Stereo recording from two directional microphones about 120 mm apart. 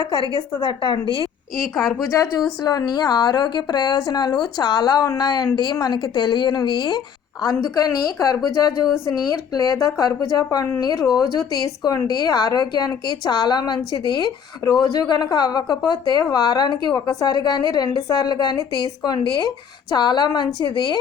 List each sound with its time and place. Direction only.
0.0 s a woman's voice: 40° left (ahead or behind)
1.6 s a woman's voice: centre (ahead or behind)
2.1 s a woman's voice: 30° left (ahead or behind)